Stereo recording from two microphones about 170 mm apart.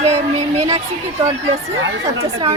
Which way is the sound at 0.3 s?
40° right (ahead or behind).